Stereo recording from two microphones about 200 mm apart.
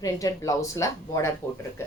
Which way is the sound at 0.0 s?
15° left (ahead or behind).